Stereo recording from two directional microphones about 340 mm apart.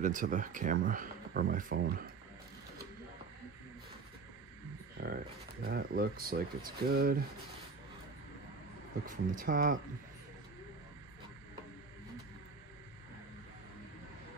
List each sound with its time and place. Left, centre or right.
0.0 s speech: right
5.0 s speech: right
9.0 s speech: right